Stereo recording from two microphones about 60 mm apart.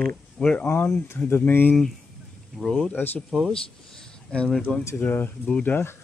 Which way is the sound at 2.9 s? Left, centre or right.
Left.